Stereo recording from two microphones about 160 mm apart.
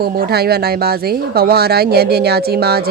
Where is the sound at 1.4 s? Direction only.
80° right.